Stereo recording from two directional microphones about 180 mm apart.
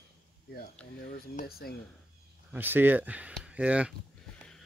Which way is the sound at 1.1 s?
50° left (ahead or behind).